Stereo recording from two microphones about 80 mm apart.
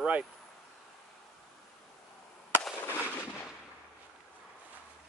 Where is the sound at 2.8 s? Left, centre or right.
Left.